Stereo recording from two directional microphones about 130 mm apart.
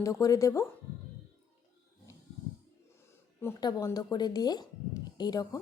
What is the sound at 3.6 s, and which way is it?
Speech, 30° left (ahead or behind).